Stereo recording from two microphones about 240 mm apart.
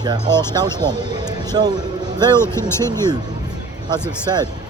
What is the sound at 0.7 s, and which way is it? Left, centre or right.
Speech, centre.